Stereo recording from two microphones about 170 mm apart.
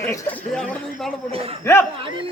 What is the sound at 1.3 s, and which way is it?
Speech, 35° right (ahead or behind).